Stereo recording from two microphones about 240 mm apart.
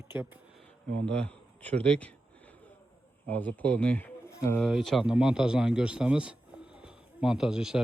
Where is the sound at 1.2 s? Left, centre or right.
Centre.